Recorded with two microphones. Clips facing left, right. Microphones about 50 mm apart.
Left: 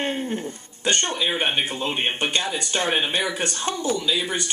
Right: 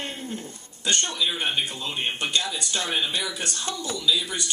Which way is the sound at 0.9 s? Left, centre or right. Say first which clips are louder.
Left 3 dB; left.